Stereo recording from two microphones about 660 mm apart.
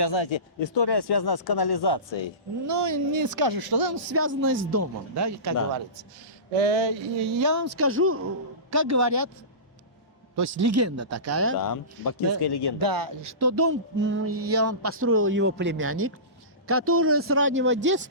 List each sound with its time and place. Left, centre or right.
0.0 s speech: left
2.6 s music: right
3.9 s music: centre
6.5 s a sound: right
7.3 s music: right
10.3 s music: right
11.5 s speech: left
12.8 s music: right
16.6 s a man's voice: centre